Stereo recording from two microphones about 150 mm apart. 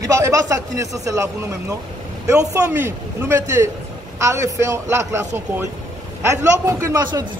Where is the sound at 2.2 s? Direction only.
20° right (ahead or behind).